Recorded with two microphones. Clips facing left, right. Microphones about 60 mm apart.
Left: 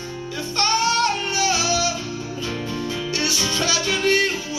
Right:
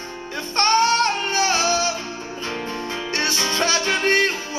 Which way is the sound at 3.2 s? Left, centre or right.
Right.